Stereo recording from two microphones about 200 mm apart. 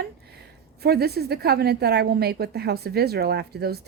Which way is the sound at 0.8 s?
50° right (ahead or behind).